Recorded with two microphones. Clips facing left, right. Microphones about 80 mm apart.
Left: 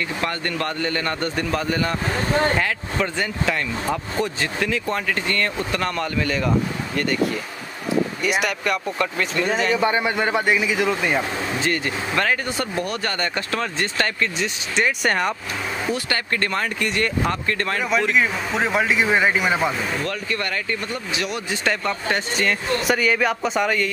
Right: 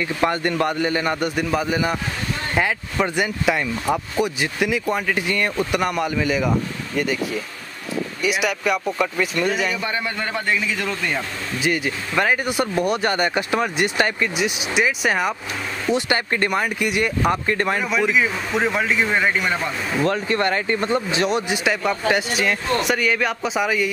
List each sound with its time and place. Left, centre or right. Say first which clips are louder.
0.2 s speech: right 8 dB; centre
8.2 s speech: right 1 dB; centre
9.8 s a man's voice: left 5 dB; left
11.6 s speech: right 5 dB; centre
15.9 s speech: right 6 dB; centre
17.8 s speech: left 3 dB; centre
20.1 s speech: right 6 dB; right
21.5 s speech: right 2 dB; centre